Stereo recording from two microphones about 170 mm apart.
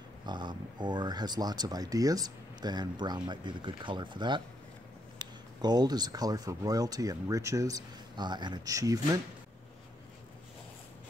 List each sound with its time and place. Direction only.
0.3 s speech: 25° right (ahead or behind)